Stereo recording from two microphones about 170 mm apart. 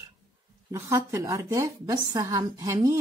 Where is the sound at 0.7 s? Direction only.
15° right (ahead or behind).